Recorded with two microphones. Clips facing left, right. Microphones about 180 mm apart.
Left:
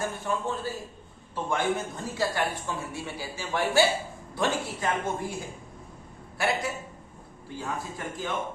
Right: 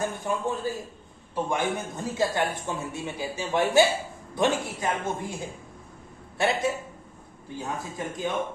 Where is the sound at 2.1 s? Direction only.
20° right (ahead or behind).